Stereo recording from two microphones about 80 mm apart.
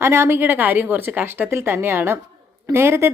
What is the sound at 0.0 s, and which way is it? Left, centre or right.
A woman's voice, right.